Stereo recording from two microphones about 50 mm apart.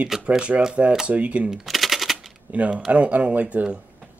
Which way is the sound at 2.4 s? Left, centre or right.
Right.